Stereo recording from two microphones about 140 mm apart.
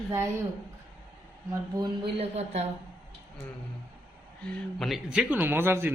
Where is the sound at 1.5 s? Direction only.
30° right (ahead or behind).